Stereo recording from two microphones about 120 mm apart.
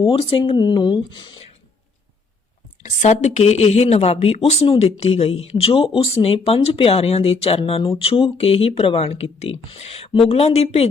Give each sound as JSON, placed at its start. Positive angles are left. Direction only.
{"t": 0.0, "sound": "speech", "side_deg": 45}
{"t": 2.8, "sound": "speech", "side_deg": 75}
{"t": 4.6, "sound": "speech", "side_deg": 45}
{"t": 4.9, "sound": "speech", "side_deg": 60}